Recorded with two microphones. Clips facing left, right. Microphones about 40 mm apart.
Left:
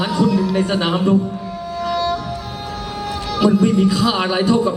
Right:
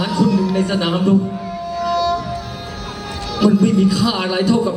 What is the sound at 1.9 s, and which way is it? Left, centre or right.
Music, left.